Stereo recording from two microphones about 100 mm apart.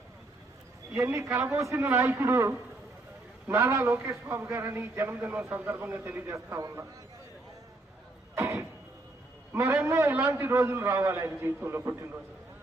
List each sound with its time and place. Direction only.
0.9 s a man's voice: 25° right (ahead or behind)
8.4 s a sound: 30° right (ahead or behind)
9.6 s a man's voice: 30° right (ahead or behind)